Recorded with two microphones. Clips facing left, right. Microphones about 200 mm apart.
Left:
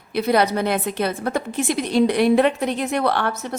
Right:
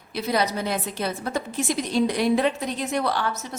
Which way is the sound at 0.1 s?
60° left (ahead or behind).